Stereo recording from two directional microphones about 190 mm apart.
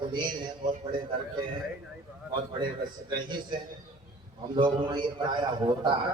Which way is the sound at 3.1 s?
25° right (ahead or behind).